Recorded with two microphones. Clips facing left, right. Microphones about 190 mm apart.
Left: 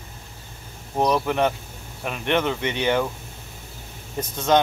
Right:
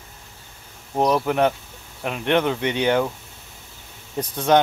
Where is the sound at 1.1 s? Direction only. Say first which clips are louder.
Right 3 dB; 10° right (ahead or behind).